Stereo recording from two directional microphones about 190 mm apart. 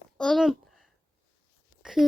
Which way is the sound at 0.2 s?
Centre (ahead or behind).